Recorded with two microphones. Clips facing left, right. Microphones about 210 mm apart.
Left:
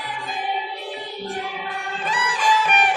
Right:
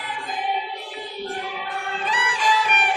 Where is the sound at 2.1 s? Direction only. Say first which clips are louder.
Left 2 dB; 50° left (ahead or behind).